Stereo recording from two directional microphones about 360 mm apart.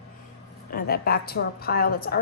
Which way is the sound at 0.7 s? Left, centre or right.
Left.